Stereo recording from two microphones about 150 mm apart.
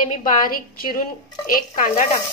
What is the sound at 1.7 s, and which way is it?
Speech, 65° left (ahead or behind).